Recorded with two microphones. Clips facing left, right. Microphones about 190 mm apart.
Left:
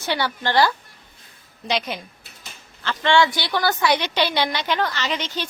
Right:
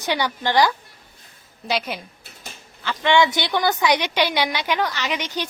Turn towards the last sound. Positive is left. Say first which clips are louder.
# even
turn(degrees=-15)  # may be behind; listen again after turning